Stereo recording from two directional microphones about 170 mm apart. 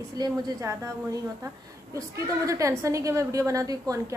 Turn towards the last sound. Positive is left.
turn(degrees=-20)  # may be behind; listen again after turning